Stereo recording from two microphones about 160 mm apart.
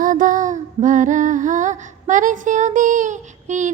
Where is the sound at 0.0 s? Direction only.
55° right (ahead or behind).